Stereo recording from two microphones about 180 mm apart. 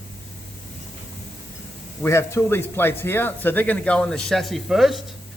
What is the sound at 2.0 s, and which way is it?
Speech, 15° left (ahead or behind).